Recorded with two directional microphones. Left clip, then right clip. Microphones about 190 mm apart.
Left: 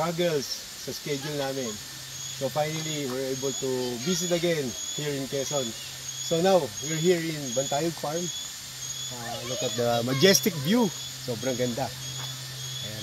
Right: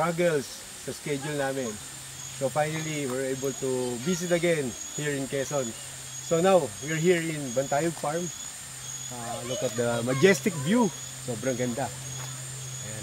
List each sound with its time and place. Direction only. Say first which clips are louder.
0.0 s speech: right 1 dB; 5° left (ahead or behind)
9.8 s speech: left 2 dB; 50° left (ahead or behind)